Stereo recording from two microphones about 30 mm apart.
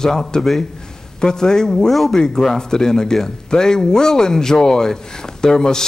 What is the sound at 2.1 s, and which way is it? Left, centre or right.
A man's voice, left.